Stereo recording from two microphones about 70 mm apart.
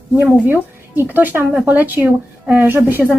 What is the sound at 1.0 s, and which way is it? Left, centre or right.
Speech, right.